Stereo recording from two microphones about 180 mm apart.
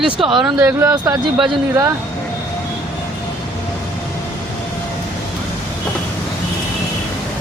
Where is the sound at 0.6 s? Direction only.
10° right (ahead or behind).